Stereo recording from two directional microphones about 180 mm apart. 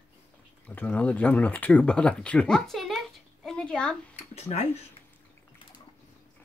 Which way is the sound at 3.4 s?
5° left (ahead or behind).